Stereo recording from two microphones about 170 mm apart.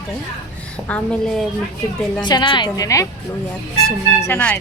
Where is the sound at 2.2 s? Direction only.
25° left (ahead or behind).